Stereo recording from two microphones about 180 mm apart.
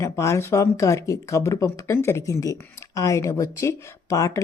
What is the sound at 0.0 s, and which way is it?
Speech, 15° left (ahead or behind).